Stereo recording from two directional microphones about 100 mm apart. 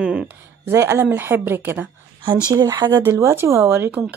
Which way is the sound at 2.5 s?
35° right (ahead or behind).